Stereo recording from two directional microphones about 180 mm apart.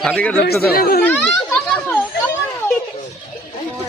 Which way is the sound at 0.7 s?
55° left (ahead or behind).